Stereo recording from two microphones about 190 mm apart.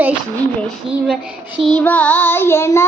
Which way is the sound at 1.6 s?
5° left (ahead or behind).